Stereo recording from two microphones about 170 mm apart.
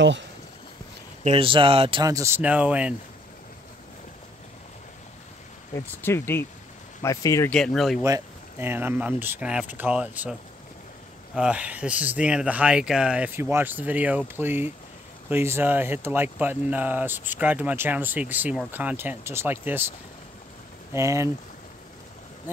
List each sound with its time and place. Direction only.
1.2 s speech: 35° right (ahead or behind); by 2.9 s 10° right (ahead or behind)
6.0 s speech: 15° left (ahead or behind)
7.5 s speech: 5° left (ahead or behind)
8.0 s speech: 15° right (ahead or behind)
11.3 s speech: 5° right (ahead or behind)
20.9 s speech: 15° right (ahead or behind)